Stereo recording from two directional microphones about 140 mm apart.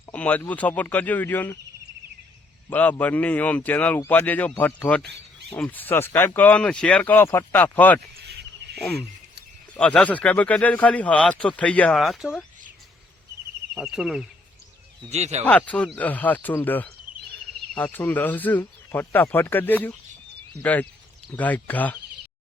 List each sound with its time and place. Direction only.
0.1 s speech: 10° left (ahead or behind)
2.6 s speech: 10° left (ahead or behind)
9.7 s speech: 10° left (ahead or behind)
13.7 s speech: 5° right (ahead or behind)
15.1 s speech: 50° right (ahead or behind)
15.4 s speech: 10° left (ahead or behind)